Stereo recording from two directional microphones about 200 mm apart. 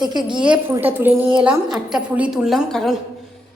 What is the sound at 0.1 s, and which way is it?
A woman's voice, 20° right (ahead or behind).